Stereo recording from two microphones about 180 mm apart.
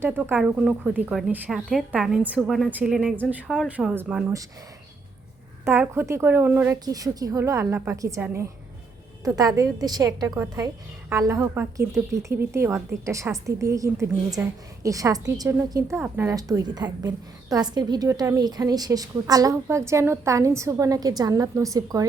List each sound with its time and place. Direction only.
0.0 s a woman's voice: 10° right (ahead or behind)
5.6 s a woman's voice: 15° right (ahead or behind)